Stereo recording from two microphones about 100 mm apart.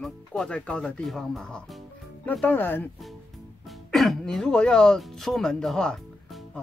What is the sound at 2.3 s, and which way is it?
Speech, 15° left (ahead or behind).